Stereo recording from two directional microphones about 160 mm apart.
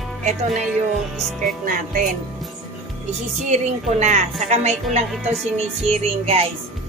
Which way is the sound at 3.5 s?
45° right (ahead or behind).